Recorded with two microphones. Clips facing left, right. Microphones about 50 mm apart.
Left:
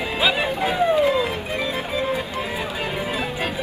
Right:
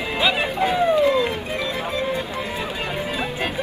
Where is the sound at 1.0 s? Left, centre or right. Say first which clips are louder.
Right 1 dB; centre.